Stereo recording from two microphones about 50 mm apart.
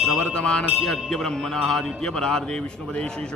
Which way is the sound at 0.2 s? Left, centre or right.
Centre.